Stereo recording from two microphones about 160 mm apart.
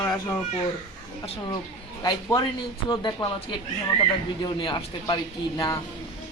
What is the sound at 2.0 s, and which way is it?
A woman's voice, 25° left (ahead or behind).